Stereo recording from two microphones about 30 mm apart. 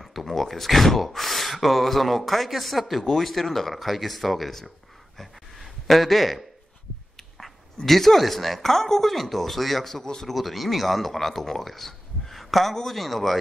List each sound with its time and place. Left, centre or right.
0.0 s speech: centre
5.1 s a sound: centre
7.3 s speech: centre
9.9 s speech: left
10.3 s speech: centre